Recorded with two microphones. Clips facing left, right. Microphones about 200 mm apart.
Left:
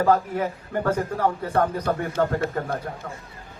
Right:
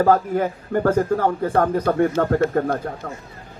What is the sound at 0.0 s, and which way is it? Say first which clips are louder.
Speech: right 4 dB; 45° right (ahead or behind).